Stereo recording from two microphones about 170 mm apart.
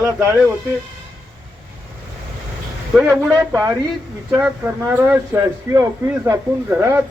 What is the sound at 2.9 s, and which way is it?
Speech, 5° right (ahead or behind).